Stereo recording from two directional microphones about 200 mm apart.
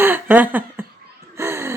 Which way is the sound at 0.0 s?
10° right (ahead or behind).